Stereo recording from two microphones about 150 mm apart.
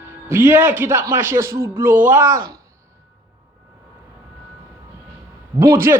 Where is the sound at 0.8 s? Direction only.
15° right (ahead or behind).